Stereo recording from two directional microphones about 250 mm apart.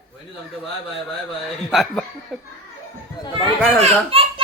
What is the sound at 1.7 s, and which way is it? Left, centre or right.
Speech, centre.